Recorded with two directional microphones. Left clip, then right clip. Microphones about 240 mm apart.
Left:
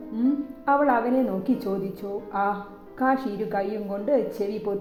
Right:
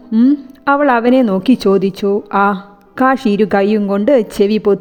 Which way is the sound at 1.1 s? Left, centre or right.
Right.